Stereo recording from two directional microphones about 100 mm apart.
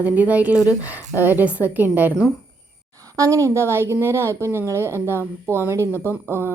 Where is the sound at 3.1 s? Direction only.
35° right (ahead or behind).